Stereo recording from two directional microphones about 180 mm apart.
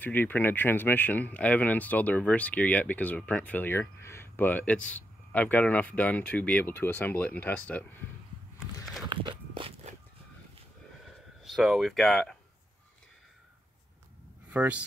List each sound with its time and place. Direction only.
0.0 s speech: 10° left (ahead or behind)
9.1 s biting: 25° right (ahead or behind)
11.4 s speech: centre (ahead or behind)
14.5 s speech: 10° right (ahead or behind)